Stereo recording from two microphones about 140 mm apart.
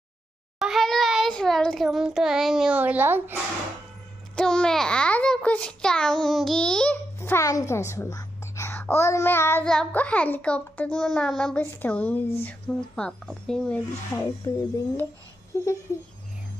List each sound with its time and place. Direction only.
0.6 s child singing: centre (ahead or behind)
4.4 s babbling: 5° left (ahead or behind)
7.2 s a child's voice: 20° left (ahead or behind)
14.5 s speech: 25° left (ahead or behind)